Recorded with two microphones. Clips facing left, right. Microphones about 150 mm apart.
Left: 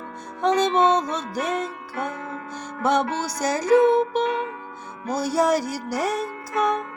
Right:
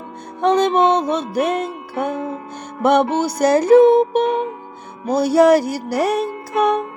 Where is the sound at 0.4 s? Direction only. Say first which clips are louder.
Right 4 dB; 60° right (ahead or behind).